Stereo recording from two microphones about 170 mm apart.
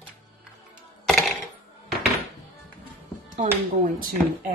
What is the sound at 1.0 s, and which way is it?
Music, centre (ahead or behind).